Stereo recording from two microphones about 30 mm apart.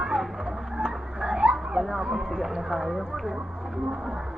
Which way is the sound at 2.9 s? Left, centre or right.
Centre.